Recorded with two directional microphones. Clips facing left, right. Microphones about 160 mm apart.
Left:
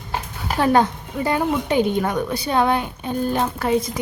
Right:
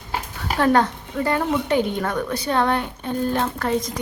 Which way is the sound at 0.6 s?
15° left (ahead or behind).